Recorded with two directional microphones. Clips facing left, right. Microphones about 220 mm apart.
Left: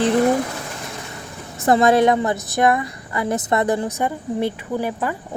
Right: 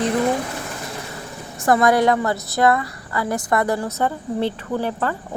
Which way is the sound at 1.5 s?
25° left (ahead or behind).